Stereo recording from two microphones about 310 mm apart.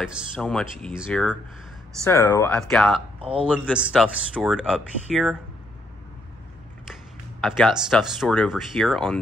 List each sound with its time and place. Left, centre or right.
0.0 s speech: centre
3.2 s a man's voice: centre
3.4 s speech: centre
6.9 s speech: centre